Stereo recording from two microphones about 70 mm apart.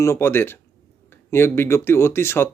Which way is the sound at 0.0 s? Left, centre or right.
Left.